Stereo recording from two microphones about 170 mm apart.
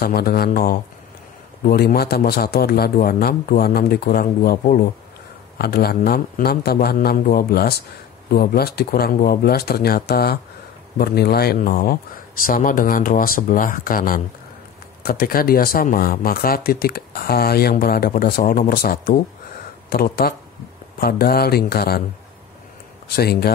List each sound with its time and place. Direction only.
0.0 s speech: 65° left (ahead or behind)
23.0 s speech: 70° left (ahead or behind)